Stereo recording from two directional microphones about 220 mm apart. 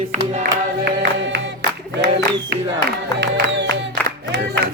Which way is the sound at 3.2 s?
50° right (ahead or behind).